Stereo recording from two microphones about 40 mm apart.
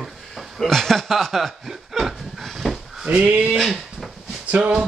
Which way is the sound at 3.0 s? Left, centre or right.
Right.